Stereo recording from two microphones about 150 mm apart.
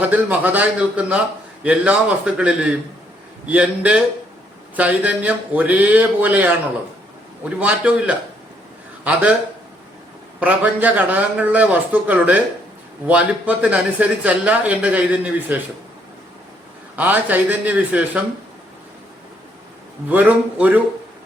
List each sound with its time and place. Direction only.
0.0 s speech: 10° right (ahead or behind)
10.4 s speech: 10° right (ahead or behind)
16.9 s speech: 10° right (ahead or behind)
20.1 s speech: 10° right (ahead or behind)